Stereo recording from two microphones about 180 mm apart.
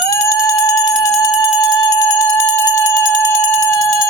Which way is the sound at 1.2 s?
20° left (ahead or behind).